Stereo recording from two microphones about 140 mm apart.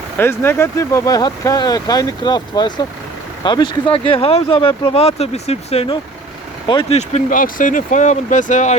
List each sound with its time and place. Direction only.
0.2 s speech: 15° left (ahead or behind); by 6.0 s 45° left (ahead or behind)
6.9 s speech: 60° left (ahead or behind)